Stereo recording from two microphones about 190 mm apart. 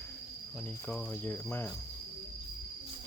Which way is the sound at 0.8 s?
5° left (ahead or behind).